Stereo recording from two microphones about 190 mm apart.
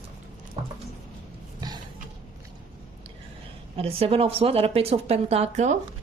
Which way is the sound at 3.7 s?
30° right (ahead or behind).